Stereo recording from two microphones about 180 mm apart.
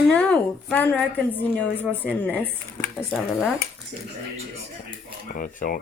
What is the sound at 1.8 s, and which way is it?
A woman's voice, 5° left (ahead or behind).